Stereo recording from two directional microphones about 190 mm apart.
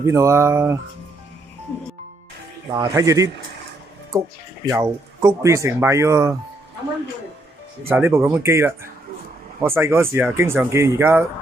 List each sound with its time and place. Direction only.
0.0 s speech: 15° right (ahead or behind)
2.7 s speech: 20° right (ahead or behind)
4.6 s speech: 15° right (ahead or behind)
7.9 s speech: 10° right (ahead or behind)